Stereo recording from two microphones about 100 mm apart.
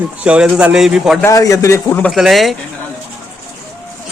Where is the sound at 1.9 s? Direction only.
15° left (ahead or behind).